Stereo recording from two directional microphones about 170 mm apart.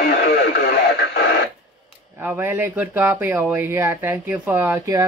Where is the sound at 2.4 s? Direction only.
10° right (ahead or behind).